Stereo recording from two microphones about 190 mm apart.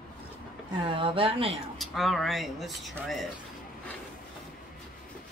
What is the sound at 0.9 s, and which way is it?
Speech, 25° right (ahead or behind).